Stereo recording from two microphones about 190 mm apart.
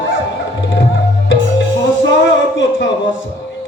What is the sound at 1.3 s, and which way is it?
Music, 70° left (ahead or behind).